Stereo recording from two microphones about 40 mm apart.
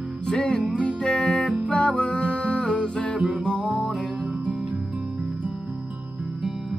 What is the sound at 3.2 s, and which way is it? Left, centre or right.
Music, right.